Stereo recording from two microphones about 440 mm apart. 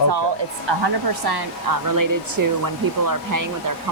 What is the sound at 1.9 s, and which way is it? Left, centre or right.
Speech, right.